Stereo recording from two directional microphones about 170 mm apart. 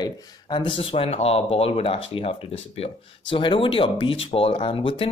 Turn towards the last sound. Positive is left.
turn(degrees=30)  # may be behind; listen again after turning